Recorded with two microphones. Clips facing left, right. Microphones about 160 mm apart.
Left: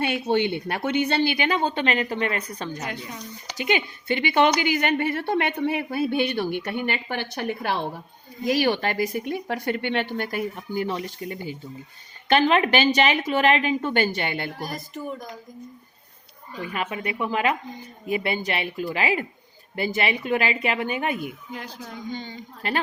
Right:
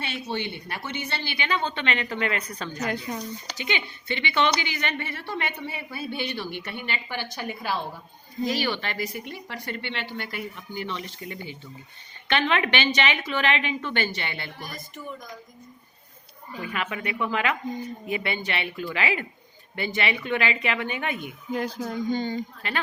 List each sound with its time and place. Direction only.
0.0 s a woman's voice: 55° left (ahead or behind); by 2.6 s 35° left (ahead or behind)
2.8 s speech: 40° right (ahead or behind)
3.6 s a woman's voice: 45° left (ahead or behind)
16.7 s a woman's voice: 35° left (ahead or behind)
21.5 s speech: 45° right (ahead or behind)